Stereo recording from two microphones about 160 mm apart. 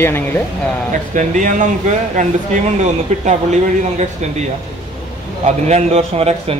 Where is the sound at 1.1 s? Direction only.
50° right (ahead or behind).